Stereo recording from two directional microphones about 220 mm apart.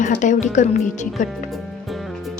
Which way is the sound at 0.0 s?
35° left (ahead or behind).